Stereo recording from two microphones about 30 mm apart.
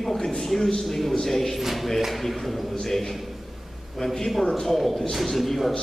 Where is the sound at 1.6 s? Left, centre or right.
Centre.